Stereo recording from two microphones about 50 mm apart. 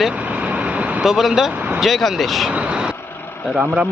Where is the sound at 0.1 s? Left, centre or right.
Right.